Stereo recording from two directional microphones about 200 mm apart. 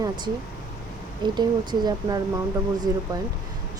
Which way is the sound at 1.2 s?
20° right (ahead or behind).